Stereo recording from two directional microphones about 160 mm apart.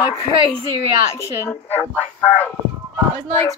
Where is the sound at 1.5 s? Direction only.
10° left (ahead or behind).